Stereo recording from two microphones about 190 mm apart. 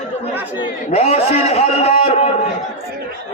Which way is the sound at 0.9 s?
30° left (ahead or behind).